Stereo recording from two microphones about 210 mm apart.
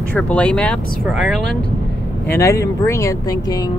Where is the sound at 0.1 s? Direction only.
5° left (ahead or behind).